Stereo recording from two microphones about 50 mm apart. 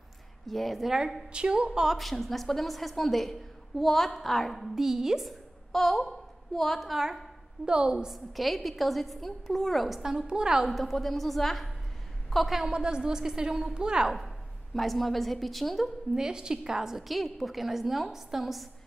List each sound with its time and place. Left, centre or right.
0.5 s a woman's voice: centre
1.3 s a woman's voice: centre
1.9 s a woman's voice: centre
4.7 s a woman's voice: centre
7.6 s a woman's voice: centre
8.1 s a woman's voice: centre
10.7 s a woman's voice: centre
12.6 s a woman's voice: centre
14.1 s a woman's voice: centre
16.2 s a woman's voice: centre